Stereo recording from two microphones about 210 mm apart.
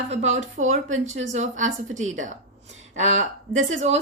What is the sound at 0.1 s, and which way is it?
Speech, 35° right (ahead or behind).